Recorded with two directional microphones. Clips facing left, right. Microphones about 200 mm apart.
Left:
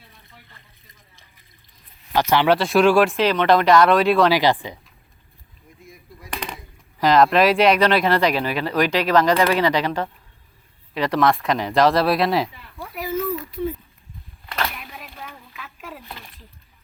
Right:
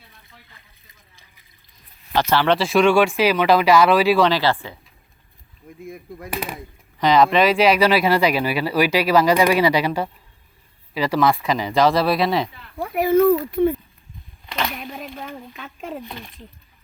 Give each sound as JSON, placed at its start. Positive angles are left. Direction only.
{"t": 2.1, "sound": "speech", "side_deg": 15}
{"t": 2.6, "sound": "speech", "side_deg": 0}
{"t": 4.3, "sound": "speech", "side_deg": 15}
{"t": 5.8, "sound": "speech", "side_deg": -55}
{"t": 6.3, "sound": "speech", "side_deg": -5}
{"t": 12.8, "sound": "speech", "side_deg": -60}
{"t": 14.8, "sound": "speech", "side_deg": -45}
{"t": 15.6, "sound": "speech", "side_deg": -30}